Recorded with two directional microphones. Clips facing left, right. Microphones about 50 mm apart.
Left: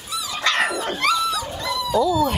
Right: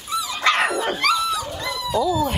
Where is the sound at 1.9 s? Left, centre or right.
Centre.